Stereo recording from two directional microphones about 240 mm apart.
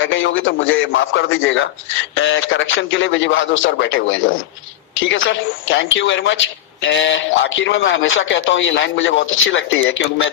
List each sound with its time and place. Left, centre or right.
0.0 s a woman's voice: left